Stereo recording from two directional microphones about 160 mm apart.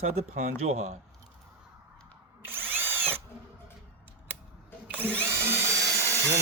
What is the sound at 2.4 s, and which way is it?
Drill, 15° right (ahead or behind).